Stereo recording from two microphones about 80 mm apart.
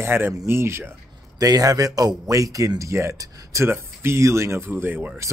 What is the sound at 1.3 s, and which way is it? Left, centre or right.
A man's voice, right.